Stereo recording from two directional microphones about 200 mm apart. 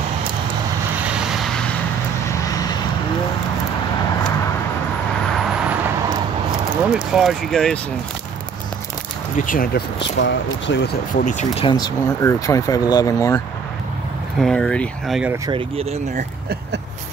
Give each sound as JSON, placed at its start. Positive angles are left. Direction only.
{"t": 2.4, "sound": "vehicle", "side_deg": 20}
{"t": 6.7, "sound": "speech", "side_deg": -5}
{"t": 9.4, "sound": "speech", "side_deg": 45}
{"t": 11.1, "sound": "speech", "side_deg": 40}
{"t": 11.6, "sound": "speech", "side_deg": 20}
{"t": 14.4, "sound": "speech", "side_deg": 5}
{"t": 15.4, "sound": "speech", "side_deg": -25}